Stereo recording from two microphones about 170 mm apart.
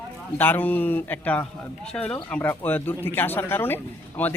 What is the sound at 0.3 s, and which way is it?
A man's voice, 10° left (ahead or behind).